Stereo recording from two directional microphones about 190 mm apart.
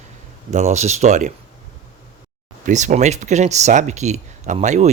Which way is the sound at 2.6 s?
40° right (ahead or behind).